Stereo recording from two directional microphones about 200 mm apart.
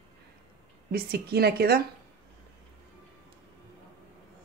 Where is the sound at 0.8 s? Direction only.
50° right (ahead or behind).